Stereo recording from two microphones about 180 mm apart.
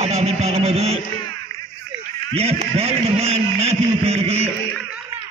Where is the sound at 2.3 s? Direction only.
35° right (ahead or behind).